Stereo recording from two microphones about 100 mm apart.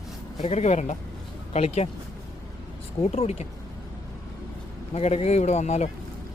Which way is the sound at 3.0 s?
90° left.